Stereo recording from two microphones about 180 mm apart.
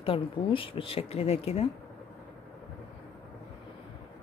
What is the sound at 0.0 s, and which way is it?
Speech, 30° left (ahead or behind).